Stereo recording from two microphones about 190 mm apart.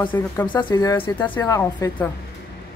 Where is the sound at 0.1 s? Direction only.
15° left (ahead or behind).